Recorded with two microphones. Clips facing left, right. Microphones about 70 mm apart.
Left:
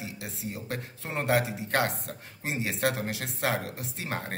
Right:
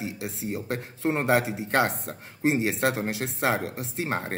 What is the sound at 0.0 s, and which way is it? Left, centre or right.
Speech, right.